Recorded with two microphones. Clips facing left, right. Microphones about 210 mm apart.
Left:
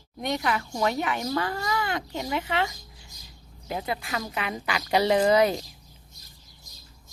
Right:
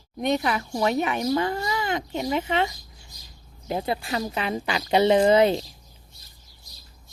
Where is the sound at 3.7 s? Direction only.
30° right (ahead or behind).